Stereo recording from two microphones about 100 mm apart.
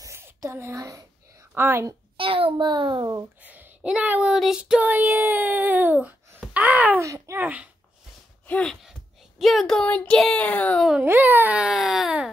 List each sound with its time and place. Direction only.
0.0 s a sound: 30° right (ahead or behind)
1.5 s a woman's voice: 25° right (ahead or behind)
2.1 s a child's voice: 65° right (ahead or behind)
3.4 s child singing: 15° right (ahead or behind)
6.5 s a sound: 15° right (ahead or behind)
7.0 s a child's voice: 30° right (ahead or behind)
7.3 s child singing: 15° right (ahead or behind)
8.5 s speech: 10° left (ahead or behind)
9.4 s speech: centre (ahead or behind)
11.0 s child singing: 20° right (ahead or behind)